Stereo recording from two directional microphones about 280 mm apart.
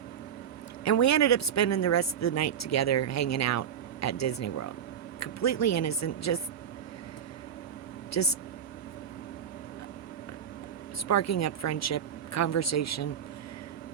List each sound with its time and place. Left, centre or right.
0.9 s speech: left
8.1 s speech: left
11.1 s speech: left